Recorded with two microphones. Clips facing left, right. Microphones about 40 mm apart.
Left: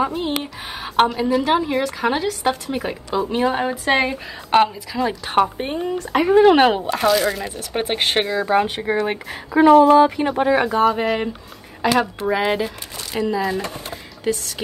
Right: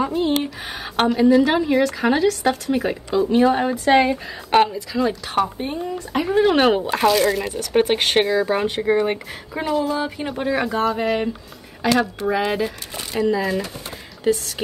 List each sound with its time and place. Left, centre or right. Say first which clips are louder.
0.0 s a woman's voice: right 2 dB; centre
5.6 s speech: left 2 dB; left
6.4 s a woman's voice: left 3 dB; centre
6.9 s speech: right 1 dB; centre
9.6 s speech: left 11 dB; left
10.2 s a woman's voice: left 5 dB; centre
13.8 s a sound: right 3 dB; centre